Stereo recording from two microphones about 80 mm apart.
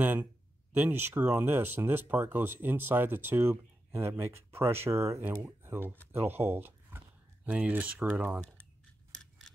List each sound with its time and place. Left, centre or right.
0.0 s speech: right
7.4 s speech: centre